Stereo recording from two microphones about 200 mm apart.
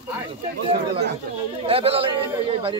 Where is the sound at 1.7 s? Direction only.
30° right (ahead or behind).